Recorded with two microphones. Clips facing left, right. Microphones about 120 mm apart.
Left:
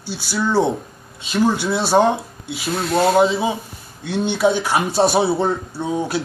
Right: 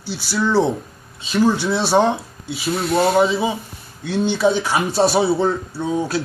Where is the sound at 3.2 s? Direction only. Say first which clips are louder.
Even; 15° left (ahead or behind).